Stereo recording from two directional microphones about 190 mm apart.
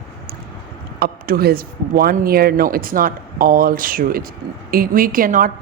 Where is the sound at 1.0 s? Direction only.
55° right (ahead or behind).